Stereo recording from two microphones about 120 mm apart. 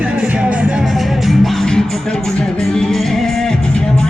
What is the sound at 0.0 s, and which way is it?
Music, 5° right (ahead or behind).